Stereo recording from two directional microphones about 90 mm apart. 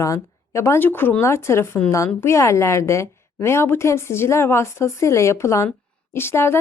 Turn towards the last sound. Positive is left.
turn(degrees=25)  # may be behind; listen again after turning